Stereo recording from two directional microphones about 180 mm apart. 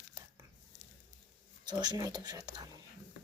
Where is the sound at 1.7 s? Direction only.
25° right (ahead or behind).